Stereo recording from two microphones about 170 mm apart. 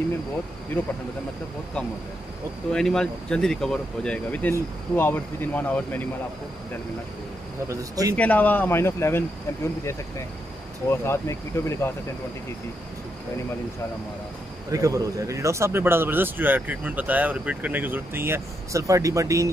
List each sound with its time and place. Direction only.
2.7 s speech: 5° left (ahead or behind)
7.6 s speech: 20° right (ahead or behind)
8.2 s speech: 10° left (ahead or behind)
14.7 s speech: 20° right (ahead or behind)